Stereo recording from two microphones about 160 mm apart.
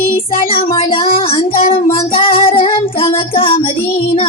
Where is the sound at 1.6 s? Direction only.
35° left (ahead or behind).